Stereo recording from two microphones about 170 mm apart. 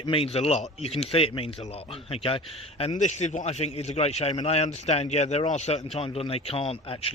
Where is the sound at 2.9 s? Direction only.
45° left (ahead or behind).